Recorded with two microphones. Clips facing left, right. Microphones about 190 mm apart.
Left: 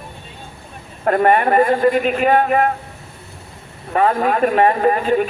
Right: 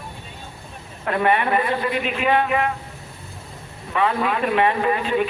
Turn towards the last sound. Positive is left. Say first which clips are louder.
# left 5 dB
turn(degrees=45)  # may be behind; listen again after turning